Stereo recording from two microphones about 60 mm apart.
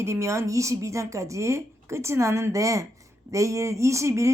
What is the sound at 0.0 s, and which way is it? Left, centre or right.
Speech, right.